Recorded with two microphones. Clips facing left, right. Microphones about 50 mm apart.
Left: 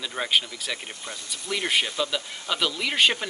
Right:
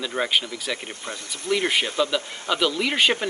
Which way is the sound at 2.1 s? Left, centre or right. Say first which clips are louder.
Right 4 dB; centre.